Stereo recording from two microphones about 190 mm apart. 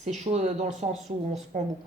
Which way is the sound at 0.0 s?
35° right (ahead or behind).